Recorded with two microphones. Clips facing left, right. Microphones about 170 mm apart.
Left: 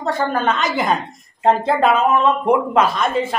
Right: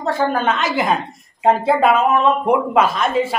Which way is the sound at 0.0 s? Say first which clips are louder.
Right 1 dB; 5° right (ahead or behind).